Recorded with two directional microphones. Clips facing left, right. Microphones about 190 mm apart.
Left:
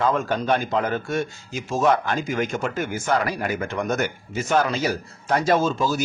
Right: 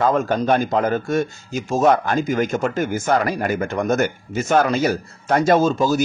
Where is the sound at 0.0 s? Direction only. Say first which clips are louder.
Right 4 dB; 45° right (ahead or behind).